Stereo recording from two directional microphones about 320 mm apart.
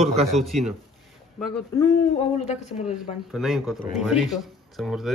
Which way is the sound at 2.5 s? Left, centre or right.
Left.